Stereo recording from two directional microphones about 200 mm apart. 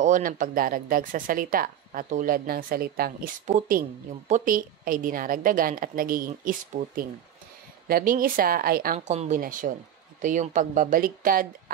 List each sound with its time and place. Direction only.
0.0 s speech: 40° right (ahead or behind)
8.9 s speech: 35° right (ahead or behind)